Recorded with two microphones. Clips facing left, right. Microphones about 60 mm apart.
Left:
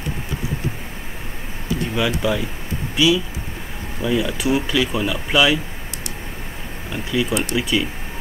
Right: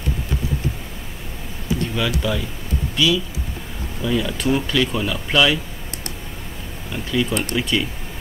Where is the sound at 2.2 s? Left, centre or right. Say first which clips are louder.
Left 2 dB; centre.